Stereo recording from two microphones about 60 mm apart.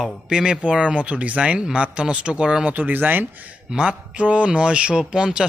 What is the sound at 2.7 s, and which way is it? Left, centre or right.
Speech, right.